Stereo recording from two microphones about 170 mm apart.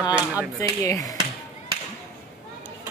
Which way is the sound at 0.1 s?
10° right (ahead or behind).